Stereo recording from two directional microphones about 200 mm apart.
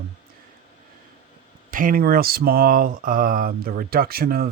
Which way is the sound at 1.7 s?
45° right (ahead or behind).